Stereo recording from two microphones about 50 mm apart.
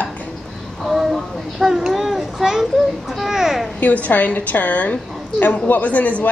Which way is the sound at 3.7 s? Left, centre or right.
Left.